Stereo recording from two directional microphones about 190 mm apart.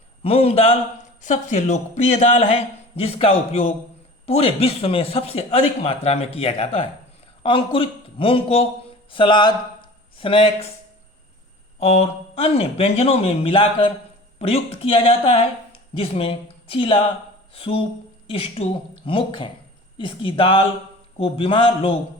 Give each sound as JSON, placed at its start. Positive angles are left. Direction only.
{"t": 0.2, "sound": "a man's voice", "side_deg": 30}
{"t": 11.8, "sound": "a man's voice", "side_deg": 35}